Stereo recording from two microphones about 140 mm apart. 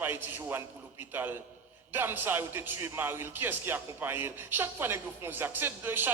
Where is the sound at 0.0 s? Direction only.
15° right (ahead or behind).